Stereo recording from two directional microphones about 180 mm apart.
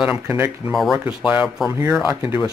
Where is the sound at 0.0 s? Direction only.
10° right (ahead or behind).